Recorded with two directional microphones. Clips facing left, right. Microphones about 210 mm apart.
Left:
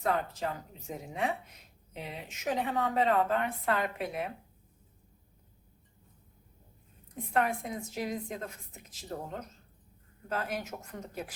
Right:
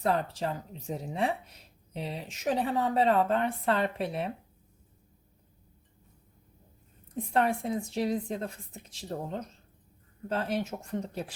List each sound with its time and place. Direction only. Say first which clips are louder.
0.0 s a woman's voice: right 2 dB; 30° right (ahead or behind)
7.3 s a woman's voice: right 3 dB; 30° right (ahead or behind)